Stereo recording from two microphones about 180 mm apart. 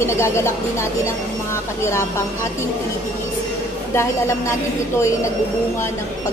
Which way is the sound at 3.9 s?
15° left (ahead or behind).